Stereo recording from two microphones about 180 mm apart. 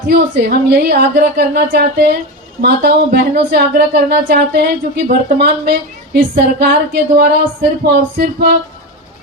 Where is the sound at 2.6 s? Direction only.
65° right (ahead or behind).